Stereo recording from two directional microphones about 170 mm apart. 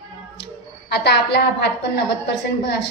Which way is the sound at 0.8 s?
75° left (ahead or behind).